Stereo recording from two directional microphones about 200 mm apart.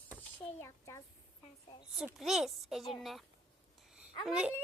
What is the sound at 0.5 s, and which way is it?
Speech, 15° left (ahead or behind).